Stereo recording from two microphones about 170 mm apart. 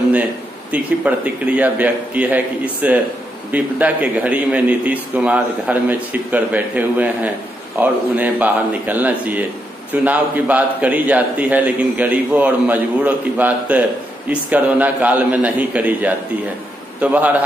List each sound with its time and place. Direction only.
0.7 s a man's voice: 10° right (ahead or behind)